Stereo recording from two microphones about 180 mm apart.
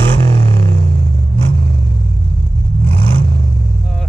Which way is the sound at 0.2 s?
30° right (ahead or behind).